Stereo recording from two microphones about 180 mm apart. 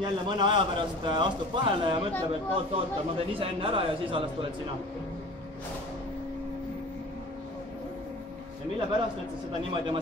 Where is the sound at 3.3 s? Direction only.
30° right (ahead or behind).